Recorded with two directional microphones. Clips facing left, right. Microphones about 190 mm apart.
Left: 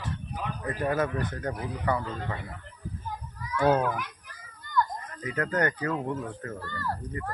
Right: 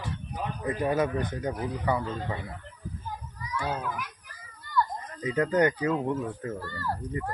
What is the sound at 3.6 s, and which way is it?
Speech, 65° left (ahead or behind).